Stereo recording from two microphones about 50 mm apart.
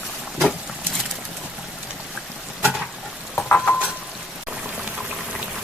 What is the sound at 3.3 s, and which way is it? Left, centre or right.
Stir, left.